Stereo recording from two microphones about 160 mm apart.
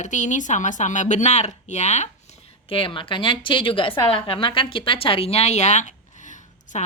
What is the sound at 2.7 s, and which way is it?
A woman's voice, 35° left (ahead or behind).